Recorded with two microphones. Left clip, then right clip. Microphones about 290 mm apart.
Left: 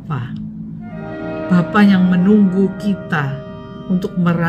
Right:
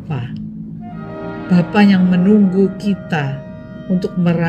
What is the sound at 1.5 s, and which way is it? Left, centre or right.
Speech, centre.